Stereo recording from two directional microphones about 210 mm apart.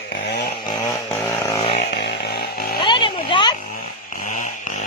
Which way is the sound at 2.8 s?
25° left (ahead or behind).